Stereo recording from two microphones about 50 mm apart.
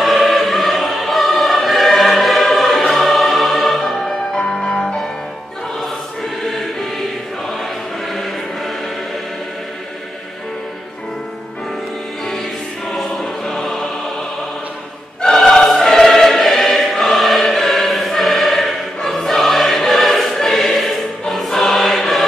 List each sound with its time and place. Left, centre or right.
0.0 s choir: centre
6.4 s choir: centre
12.9 s choir: centre
15.2 s choir: centre